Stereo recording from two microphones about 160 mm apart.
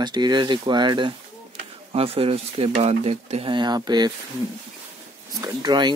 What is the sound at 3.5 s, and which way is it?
Speech, 25° right (ahead or behind).